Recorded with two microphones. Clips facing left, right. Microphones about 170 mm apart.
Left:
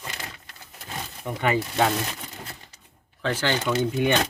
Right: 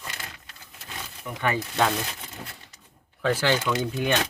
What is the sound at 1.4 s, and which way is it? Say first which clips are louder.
Speech: left 2 dB; 20° left (ahead or behind).